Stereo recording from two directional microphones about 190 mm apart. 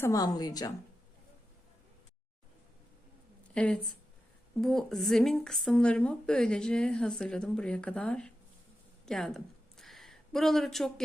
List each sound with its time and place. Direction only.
0.0 s a woman's voice: 20° left (ahead or behind)
3.5 s a woman's voice: 5° left (ahead or behind)
9.0 s a sound: centre (ahead or behind)